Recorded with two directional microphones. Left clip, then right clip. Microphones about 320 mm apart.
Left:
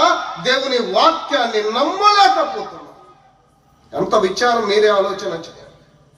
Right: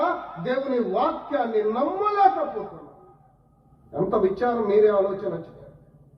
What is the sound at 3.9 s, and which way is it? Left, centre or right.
A man's voice, left.